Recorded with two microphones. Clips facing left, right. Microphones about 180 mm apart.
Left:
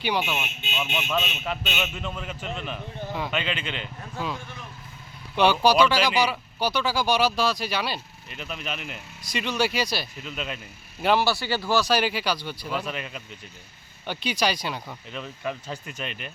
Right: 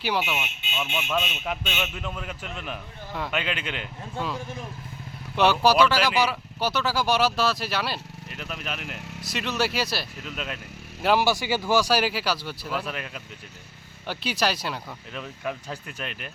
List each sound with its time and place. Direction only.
0.0 s a man's voice: centre (ahead or behind)
1.6 s a man's voice: 5° left (ahead or behind)
5.4 s speech: centre (ahead or behind)